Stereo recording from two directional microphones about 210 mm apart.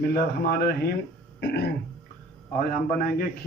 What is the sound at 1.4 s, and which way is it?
Throat clearing, 50° left (ahead or behind).